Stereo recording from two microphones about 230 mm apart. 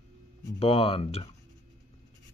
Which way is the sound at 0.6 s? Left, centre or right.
Left.